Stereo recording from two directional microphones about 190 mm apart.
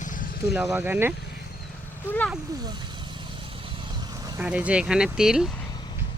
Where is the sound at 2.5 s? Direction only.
20° right (ahead or behind).